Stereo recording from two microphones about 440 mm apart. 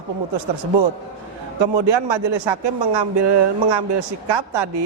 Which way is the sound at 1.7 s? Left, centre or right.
Right.